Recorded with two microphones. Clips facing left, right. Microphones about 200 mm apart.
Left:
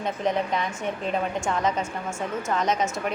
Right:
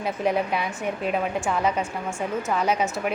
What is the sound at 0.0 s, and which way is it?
Speech, 5° right (ahead or behind).